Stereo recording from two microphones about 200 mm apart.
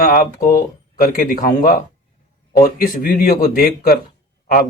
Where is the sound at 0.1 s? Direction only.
45° left (ahead or behind).